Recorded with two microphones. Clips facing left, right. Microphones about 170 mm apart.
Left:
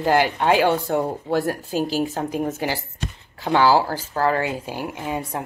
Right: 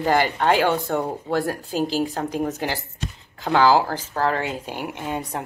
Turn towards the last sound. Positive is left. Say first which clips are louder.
# left 1 dB
turn(degrees=5)  # may be behind; listen again after turning